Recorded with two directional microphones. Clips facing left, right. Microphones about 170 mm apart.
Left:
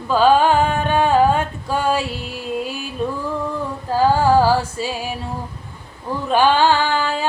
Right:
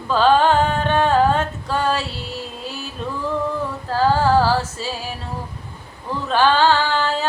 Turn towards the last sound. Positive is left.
turn(degrees=15)  # may be behind; listen again after turning